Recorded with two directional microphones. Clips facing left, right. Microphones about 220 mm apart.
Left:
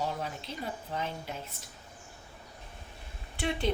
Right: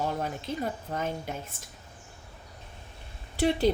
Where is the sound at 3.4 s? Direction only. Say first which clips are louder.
Right 7 dB; 40° right (ahead or behind).